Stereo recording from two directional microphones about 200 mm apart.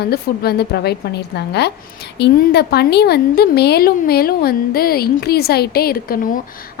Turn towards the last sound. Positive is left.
turn(degrees=50)  # may be behind; listen again after turning